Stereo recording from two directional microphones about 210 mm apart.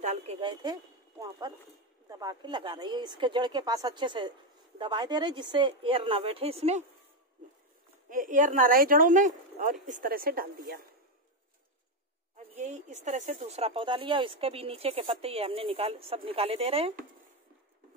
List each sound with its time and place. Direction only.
0.0 s speech: 30° right (ahead or behind)
2.0 s speech: 15° right (ahead or behind)
8.1 s a woman's voice: 40° right (ahead or behind)
12.5 s speech: 35° right (ahead or behind)